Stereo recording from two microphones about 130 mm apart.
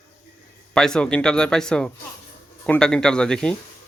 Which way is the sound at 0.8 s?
5° left (ahead or behind).